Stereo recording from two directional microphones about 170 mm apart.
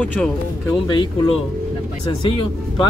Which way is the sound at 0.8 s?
25° left (ahead or behind).